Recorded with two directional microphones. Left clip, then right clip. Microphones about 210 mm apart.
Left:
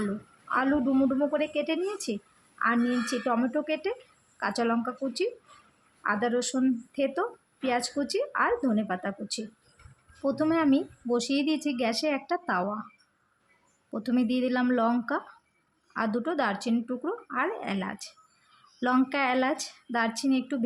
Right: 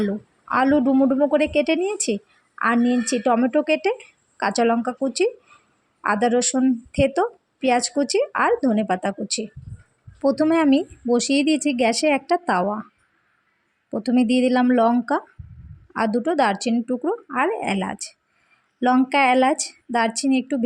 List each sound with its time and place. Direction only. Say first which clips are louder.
0.0 s a woman's voice: right 8 dB; 25° right (ahead or behind)
13.9 s a woman's voice: right 8 dB; 25° right (ahead or behind)